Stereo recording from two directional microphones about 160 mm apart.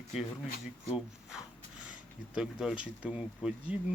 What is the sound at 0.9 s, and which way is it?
Speech, centre (ahead or behind).